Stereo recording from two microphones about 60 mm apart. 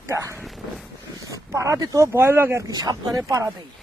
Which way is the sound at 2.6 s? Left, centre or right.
Right.